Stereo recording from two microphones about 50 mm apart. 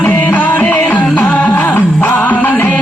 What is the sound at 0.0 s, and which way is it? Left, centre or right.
Music, left.